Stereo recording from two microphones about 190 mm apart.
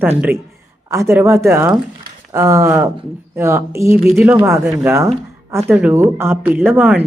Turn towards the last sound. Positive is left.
turn(degrees=-10)  # may be behind; listen again after turning